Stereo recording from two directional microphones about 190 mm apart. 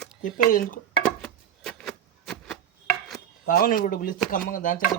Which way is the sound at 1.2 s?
5° left (ahead or behind).